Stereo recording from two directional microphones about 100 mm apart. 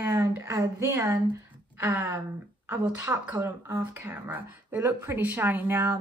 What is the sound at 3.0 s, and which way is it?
A woman's voice, 20° right (ahead or behind).